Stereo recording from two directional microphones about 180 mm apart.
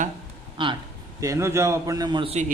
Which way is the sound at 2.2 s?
35° right (ahead or behind).